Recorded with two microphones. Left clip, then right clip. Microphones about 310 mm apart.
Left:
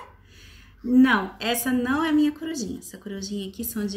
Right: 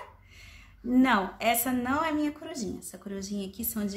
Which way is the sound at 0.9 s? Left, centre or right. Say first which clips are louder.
Left 4 dB; centre.